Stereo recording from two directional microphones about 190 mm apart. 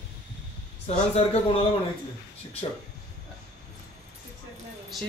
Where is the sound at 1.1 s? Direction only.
30° left (ahead or behind).